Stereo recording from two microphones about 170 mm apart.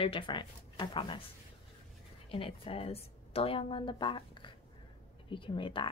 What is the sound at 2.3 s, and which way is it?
A woman's voice, 30° left (ahead or behind).